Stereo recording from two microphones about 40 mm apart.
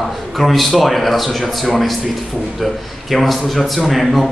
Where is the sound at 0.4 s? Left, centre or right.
Centre.